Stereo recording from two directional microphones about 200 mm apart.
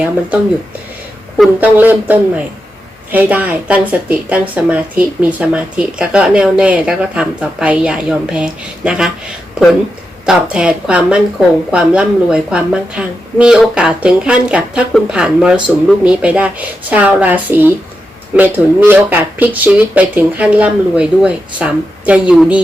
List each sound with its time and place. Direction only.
1.4 s speech: 10° right (ahead or behind)
10.2 s speech: 5° right (ahead or behind)